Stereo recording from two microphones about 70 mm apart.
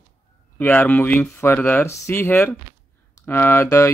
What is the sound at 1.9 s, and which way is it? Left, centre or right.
Speech, left.